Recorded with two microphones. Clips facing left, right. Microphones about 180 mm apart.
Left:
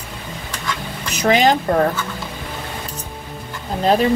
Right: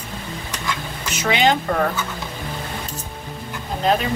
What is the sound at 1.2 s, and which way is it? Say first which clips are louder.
Speech: left 4 dB; 40° left (ahead or behind).